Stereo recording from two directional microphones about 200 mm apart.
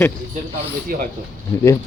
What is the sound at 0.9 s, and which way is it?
Speech, 45° right (ahead or behind).